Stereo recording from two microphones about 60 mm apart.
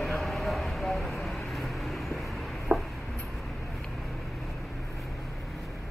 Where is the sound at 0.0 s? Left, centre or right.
Centre.